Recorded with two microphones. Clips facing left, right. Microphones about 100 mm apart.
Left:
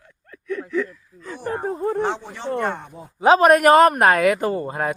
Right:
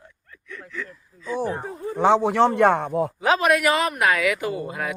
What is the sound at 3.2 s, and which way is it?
Speech, 35° left (ahead or behind).